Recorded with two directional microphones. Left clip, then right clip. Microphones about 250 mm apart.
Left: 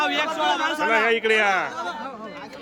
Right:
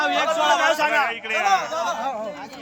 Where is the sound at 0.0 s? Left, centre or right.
Centre.